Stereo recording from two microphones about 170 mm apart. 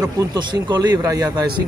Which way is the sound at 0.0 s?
20° right (ahead or behind).